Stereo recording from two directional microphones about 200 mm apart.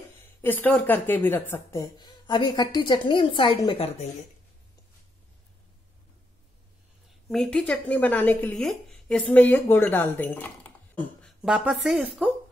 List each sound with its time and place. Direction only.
0.2 s speech: 10° left (ahead or behind); by 4.1 s 30° left (ahead or behind)
7.2 s speech: 5° left (ahead or behind)